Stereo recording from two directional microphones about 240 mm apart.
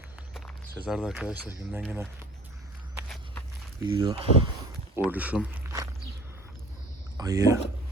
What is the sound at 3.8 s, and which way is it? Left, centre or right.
Speech, centre.